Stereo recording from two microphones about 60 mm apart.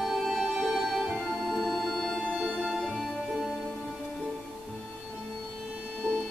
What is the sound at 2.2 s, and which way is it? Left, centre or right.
Music, centre.